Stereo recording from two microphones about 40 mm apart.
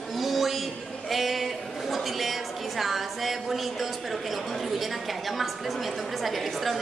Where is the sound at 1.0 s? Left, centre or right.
Centre.